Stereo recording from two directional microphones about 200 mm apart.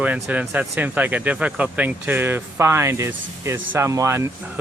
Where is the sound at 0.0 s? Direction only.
5° right (ahead or behind).